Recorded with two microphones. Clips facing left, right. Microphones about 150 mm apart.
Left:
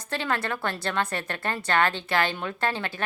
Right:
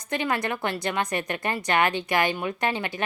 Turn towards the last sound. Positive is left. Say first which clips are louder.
# right 1 dB
turn(degrees=-15)  # may be behind; listen again after turning